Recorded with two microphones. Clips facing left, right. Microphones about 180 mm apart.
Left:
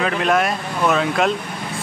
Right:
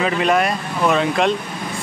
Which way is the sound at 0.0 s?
Centre (ahead or behind).